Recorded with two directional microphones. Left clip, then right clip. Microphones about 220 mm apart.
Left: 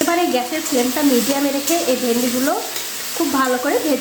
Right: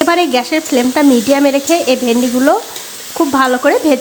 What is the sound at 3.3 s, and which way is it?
Speech, 40° right (ahead or behind).